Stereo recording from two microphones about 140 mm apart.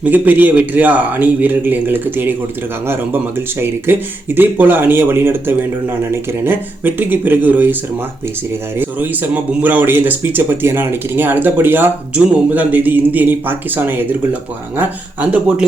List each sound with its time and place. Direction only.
0.0 s speech: 10° right (ahead or behind)
8.8 s speech: 15° right (ahead or behind)